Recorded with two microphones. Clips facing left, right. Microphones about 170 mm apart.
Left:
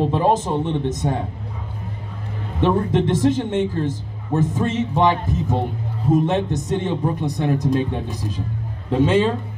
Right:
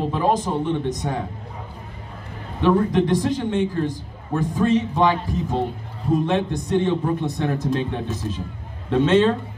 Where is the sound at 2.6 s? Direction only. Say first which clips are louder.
Even; 25° left (ahead or behind).